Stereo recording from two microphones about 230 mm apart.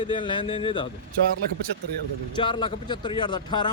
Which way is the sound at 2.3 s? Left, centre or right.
Left.